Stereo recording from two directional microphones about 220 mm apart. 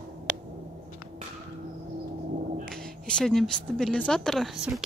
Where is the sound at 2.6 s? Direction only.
5° left (ahead or behind).